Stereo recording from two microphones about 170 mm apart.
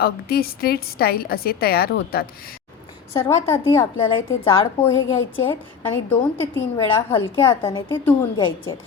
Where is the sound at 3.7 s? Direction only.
30° left (ahead or behind).